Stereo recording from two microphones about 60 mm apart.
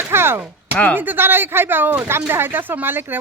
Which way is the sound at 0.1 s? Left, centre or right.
Right.